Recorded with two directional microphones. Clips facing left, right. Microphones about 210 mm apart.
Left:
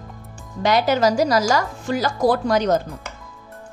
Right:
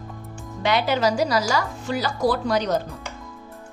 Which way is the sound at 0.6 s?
40° left (ahead or behind).